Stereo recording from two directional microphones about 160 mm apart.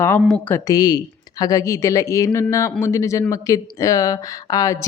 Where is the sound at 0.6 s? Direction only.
25° left (ahead or behind).